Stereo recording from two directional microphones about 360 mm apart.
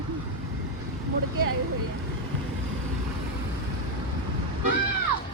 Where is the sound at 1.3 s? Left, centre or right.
Right.